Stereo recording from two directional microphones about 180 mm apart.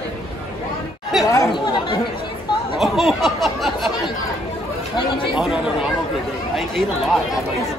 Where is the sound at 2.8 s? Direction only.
Centre (ahead or behind).